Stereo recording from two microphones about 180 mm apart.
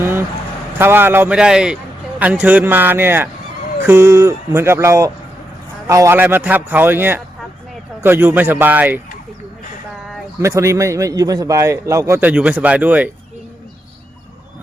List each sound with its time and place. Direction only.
0.0 s a sound: 10° right (ahead or behind)
0.8 s a man's voice: 10° right (ahead or behind)
10.4 s a man's voice: 15° right (ahead or behind)